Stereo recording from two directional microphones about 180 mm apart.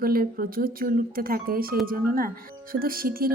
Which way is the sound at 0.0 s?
55° right (ahead or behind).